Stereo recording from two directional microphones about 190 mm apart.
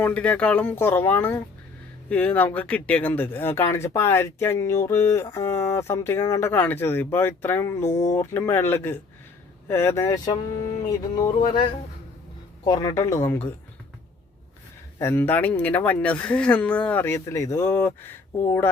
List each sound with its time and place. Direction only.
0.0 s speech: 5° left (ahead or behind)
12.6 s speech: 20° left (ahead or behind)
14.9 s speech: 15° left (ahead or behind)